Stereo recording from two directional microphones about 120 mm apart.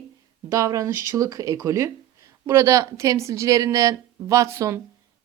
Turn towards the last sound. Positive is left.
turn(degrees=-25)  # may be behind; listen again after turning